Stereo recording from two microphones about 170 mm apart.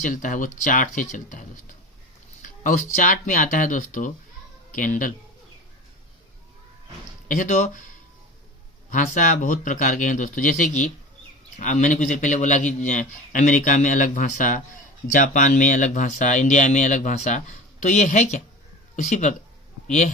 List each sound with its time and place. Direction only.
0.0 s a man's voice: 50° left (ahead or behind)
2.4 s a sound: 50° left (ahead or behind)
2.9 s a man's voice: 50° left (ahead or behind)
7.3 s a man's voice: 50° left (ahead or behind)
8.9 s a man's voice: 50° left (ahead or behind)